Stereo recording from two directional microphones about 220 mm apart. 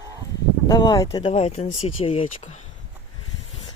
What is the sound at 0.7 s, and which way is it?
Speech, 20° left (ahead or behind).